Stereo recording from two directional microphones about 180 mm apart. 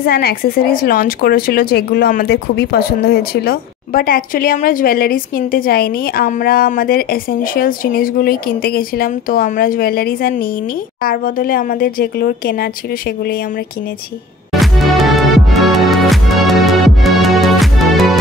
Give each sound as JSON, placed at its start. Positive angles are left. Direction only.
{"t": 0.0, "sound": "a woman's voice", "side_deg": 60}
{"t": 14.5, "sound": "music", "side_deg": 0}